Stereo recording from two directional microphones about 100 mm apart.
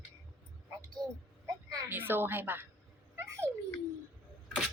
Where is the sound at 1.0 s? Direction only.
40° right (ahead or behind).